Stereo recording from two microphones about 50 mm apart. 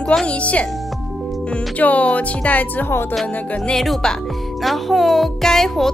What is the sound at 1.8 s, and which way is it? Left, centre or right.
Speech, left.